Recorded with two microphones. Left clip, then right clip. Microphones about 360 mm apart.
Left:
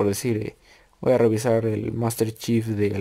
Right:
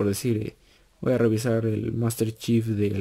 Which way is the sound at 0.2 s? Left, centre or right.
Left.